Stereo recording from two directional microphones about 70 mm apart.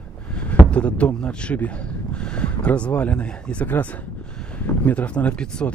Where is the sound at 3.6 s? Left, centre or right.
Left.